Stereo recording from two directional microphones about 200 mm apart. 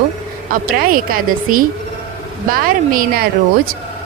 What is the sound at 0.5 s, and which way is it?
A woman's voice, 45° right (ahead or behind).